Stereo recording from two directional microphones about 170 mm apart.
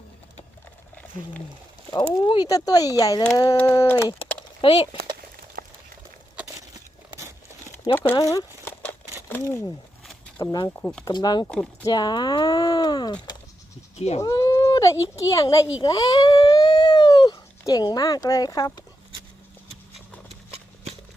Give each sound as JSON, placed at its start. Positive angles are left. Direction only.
{"t": 2.2, "sound": "speech", "side_deg": 25}
{"t": 4.6, "sound": "speech", "side_deg": 30}
{"t": 6.5, "sound": "a sound", "side_deg": -20}
{"t": 7.9, "sound": "a sound", "side_deg": 15}
{"t": 9.3, "sound": "speech", "side_deg": 15}
{"t": 10.8, "sound": "speech", "side_deg": 10}
{"t": 11.0, "sound": "speech", "side_deg": 25}
{"t": 11.4, "sound": "speech", "side_deg": 10}
{"t": 11.9, "sound": "speech", "side_deg": 25}
{"t": 13.9, "sound": "speech", "side_deg": 40}
{"t": 14.2, "sound": "speech", "side_deg": 20}